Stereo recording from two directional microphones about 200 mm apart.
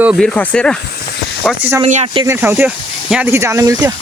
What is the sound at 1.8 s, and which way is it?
Speech, 30° right (ahead or behind).